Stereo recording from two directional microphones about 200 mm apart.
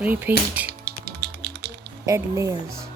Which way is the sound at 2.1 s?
15° right (ahead or behind).